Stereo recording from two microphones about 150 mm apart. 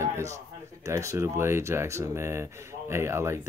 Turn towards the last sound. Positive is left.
turn(degrees=-15)  # may be behind; listen again after turning